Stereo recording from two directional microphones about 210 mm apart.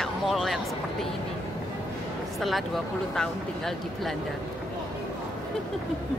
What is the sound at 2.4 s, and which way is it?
Speech, centre (ahead or behind).